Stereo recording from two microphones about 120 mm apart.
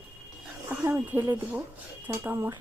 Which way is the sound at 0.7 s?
15° right (ahead or behind).